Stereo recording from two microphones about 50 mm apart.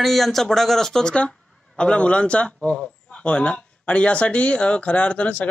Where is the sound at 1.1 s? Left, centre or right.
Left.